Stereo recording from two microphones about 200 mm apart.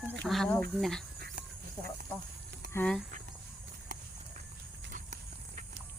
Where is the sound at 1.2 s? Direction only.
50° right (ahead or behind).